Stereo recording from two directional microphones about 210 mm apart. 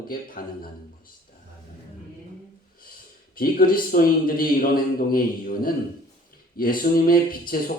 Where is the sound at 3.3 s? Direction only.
45° left (ahead or behind).